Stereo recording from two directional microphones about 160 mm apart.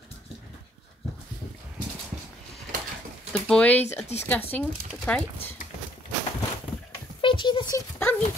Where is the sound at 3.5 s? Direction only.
10° left (ahead or behind).